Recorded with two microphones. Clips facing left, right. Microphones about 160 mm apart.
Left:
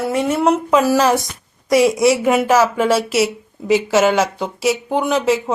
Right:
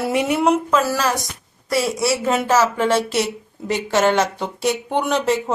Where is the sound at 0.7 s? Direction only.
15° left (ahead or behind).